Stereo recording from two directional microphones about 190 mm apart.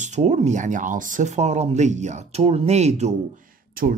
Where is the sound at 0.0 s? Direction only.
40° right (ahead or behind).